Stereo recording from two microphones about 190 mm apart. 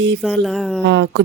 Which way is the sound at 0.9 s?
65° right (ahead or behind).